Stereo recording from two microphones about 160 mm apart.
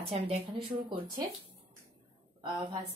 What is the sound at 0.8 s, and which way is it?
Speech, 30° right (ahead or behind).